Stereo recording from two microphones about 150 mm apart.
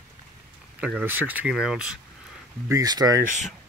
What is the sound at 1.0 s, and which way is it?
Speech, 10° right (ahead or behind).